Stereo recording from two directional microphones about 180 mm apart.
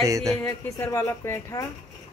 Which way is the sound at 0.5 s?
15° left (ahead or behind).